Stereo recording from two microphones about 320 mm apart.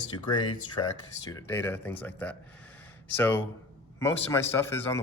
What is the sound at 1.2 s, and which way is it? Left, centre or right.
Speech, centre.